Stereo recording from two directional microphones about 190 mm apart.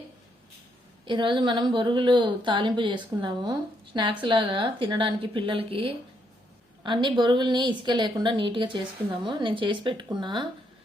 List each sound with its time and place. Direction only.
1.0 s a woman's voice: 25° right (ahead or behind)